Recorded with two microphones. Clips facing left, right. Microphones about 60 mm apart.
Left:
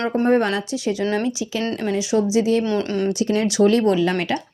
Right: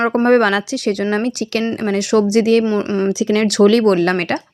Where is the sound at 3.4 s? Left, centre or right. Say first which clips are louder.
Right 5 dB; right.